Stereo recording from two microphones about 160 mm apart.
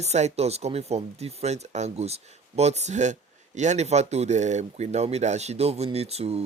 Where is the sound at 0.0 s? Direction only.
45° right (ahead or behind).